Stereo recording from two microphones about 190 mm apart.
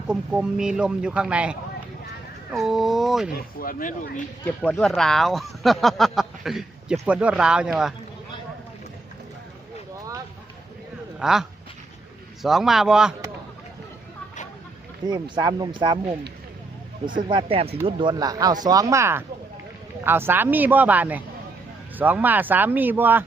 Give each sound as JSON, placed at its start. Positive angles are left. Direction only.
{"t": 0.1, "sound": "speech", "side_deg": -5}
{"t": 3.3, "sound": "speech", "side_deg": 50}
{"t": 4.4, "sound": "speech", "side_deg": 5}
{"t": 11.2, "sound": "speech", "side_deg": -5}
{"t": 15.0, "sound": "speech", "side_deg": -20}
{"t": 17.2, "sound": "speech", "side_deg": -30}